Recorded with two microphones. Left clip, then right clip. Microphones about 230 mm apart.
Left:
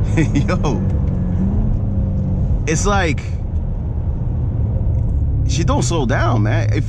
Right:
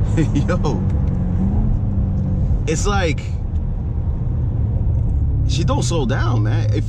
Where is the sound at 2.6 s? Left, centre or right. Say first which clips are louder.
Left 3 dB; left.